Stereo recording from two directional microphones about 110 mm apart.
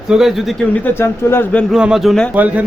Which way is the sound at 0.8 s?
20° left (ahead or behind).